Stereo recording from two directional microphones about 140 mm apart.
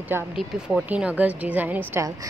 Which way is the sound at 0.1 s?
15° right (ahead or behind).